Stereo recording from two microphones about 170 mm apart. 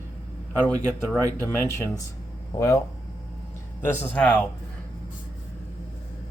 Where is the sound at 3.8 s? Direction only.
10° left (ahead or behind).